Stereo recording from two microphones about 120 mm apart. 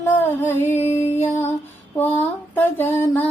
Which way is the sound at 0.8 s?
65° left (ahead or behind).